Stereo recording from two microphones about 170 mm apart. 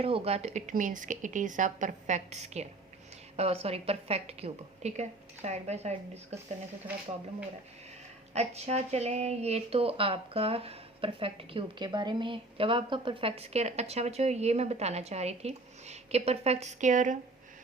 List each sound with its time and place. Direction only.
0.0 s speech: 35° right (ahead or behind)
8.3 s speech: 40° right (ahead or behind)